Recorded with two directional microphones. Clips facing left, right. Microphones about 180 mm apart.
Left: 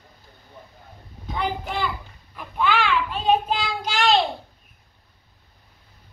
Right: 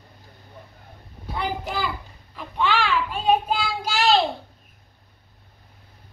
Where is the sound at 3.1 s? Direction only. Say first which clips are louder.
Right 1 dB; 10° right (ahead or behind).